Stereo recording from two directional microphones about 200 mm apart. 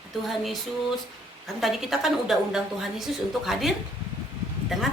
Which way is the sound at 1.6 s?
Centre (ahead or behind).